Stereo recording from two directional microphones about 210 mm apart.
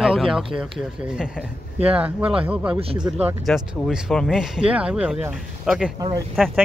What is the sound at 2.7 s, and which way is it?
Speech, 25° right (ahead or behind).